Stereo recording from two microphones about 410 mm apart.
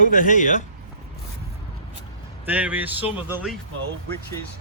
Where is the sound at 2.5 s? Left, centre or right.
Centre.